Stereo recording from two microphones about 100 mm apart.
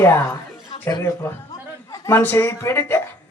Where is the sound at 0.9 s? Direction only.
45° left (ahead or behind).